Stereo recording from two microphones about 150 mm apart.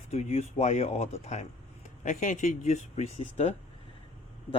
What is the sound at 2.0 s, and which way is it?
Speech, 60° left (ahead or behind).